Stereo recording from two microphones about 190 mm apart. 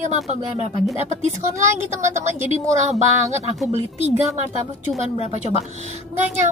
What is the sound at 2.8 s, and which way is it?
Speech, 35° right (ahead or behind).